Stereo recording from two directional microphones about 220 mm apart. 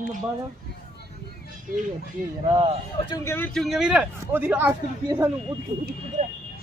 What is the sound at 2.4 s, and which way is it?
Speech, 20° right (ahead or behind).